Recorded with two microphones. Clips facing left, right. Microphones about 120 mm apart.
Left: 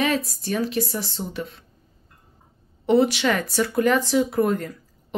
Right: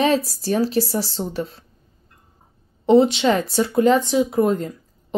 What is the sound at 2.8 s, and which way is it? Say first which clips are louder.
A woman's voice: right 4 dB; 25° right (ahead or behind).